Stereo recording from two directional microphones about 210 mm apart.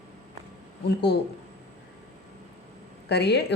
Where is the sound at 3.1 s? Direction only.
50° left (ahead or behind).